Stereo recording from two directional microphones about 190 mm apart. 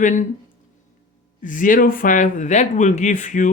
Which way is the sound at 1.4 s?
45° left (ahead or behind).